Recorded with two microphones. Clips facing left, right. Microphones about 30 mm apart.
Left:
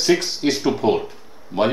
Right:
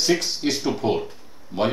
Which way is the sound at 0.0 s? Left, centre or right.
Centre.